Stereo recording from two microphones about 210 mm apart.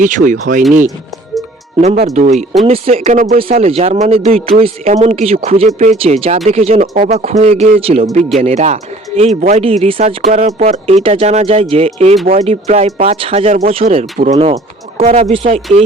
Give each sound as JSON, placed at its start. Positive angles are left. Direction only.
{"t": 0.0, "sound": "speech", "side_deg": -35}
{"t": 2.1, "sound": "speech", "side_deg": -35}